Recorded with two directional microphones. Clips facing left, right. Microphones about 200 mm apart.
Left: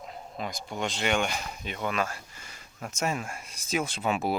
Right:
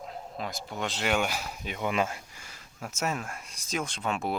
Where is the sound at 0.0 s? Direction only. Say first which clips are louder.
Even; centre (ahead or behind).